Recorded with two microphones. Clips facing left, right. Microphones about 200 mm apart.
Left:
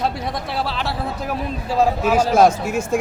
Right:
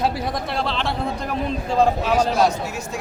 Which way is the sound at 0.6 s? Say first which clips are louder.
Right 1 dB; 5° left (ahead or behind).